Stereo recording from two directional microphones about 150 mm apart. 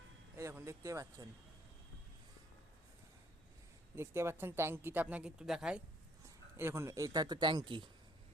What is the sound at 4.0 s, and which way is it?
Speech, 15° right (ahead or behind).